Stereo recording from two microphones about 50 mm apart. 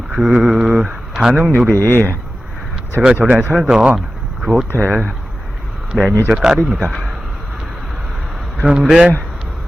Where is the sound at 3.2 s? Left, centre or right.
Right.